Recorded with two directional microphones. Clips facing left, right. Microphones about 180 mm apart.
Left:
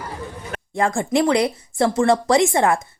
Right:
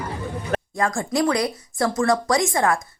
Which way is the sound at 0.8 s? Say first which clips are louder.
Left 5 dB; 25° left (ahead or behind).